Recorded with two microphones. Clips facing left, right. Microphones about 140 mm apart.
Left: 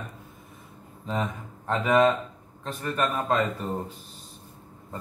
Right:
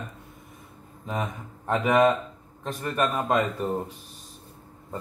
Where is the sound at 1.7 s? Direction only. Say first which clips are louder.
Right 1 dB; 15° right (ahead or behind).